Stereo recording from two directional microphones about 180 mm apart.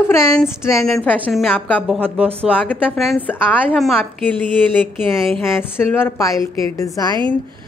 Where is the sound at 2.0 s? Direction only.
35° right (ahead or behind).